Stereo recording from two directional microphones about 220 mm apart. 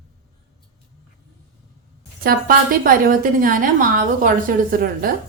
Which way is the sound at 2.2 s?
40° right (ahead or behind).